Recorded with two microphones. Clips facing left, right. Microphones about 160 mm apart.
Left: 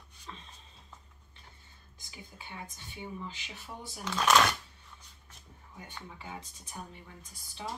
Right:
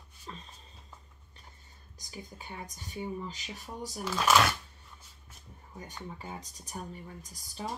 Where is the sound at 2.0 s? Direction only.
40° right (ahead or behind).